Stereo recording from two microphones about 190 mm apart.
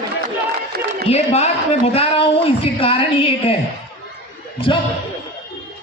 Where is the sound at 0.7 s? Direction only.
55° right (ahead or behind).